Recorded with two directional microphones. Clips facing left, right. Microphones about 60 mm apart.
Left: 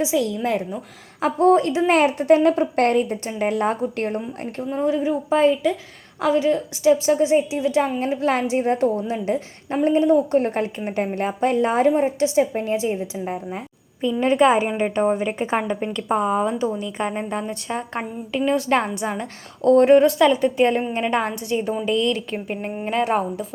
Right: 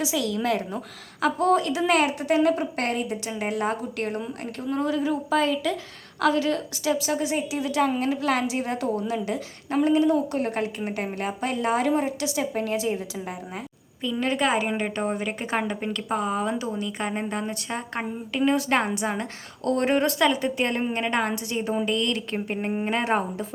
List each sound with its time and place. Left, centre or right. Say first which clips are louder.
0.0 s a woman's voice: left 4 dB; left; by 21.8 s centre
21.8 s a woman's voice: left 5 dB; centre
22.7 s speech: left 4 dB; centre